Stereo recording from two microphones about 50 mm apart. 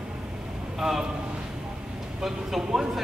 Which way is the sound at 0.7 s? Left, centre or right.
Centre.